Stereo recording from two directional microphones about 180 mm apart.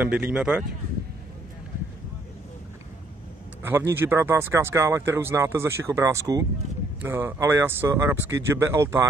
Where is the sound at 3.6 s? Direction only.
15° right (ahead or behind).